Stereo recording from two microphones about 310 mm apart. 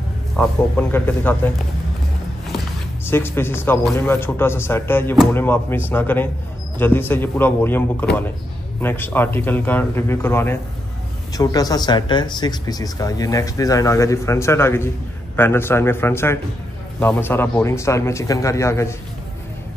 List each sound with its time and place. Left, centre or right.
0.4 s speech: centre
3.1 s speech: centre